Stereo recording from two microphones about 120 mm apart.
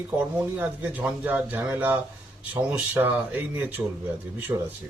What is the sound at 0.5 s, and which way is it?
Speech, 15° right (ahead or behind).